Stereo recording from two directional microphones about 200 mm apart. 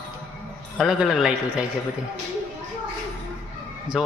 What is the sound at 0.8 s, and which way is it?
Speech, centre (ahead or behind).